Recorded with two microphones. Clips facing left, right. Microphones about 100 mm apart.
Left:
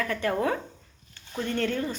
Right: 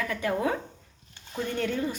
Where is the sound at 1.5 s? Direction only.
10° right (ahead or behind).